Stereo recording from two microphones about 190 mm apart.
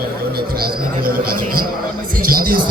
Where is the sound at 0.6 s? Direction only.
50° right (ahead or behind).